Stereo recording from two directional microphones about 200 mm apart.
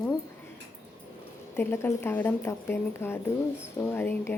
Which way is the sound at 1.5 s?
10° left (ahead or behind).